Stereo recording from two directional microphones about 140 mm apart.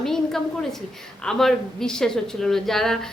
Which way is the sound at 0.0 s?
5° left (ahead or behind).